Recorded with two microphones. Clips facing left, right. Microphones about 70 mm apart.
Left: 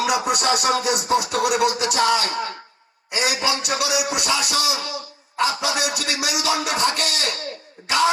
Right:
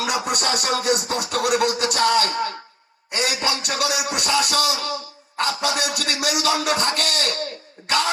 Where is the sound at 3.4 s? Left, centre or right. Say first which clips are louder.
Left 1 dB; right.